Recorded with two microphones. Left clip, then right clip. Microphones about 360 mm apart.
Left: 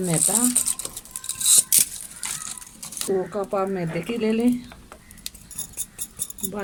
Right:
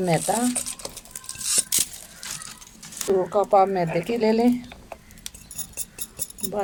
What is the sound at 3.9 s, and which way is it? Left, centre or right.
Speech, right.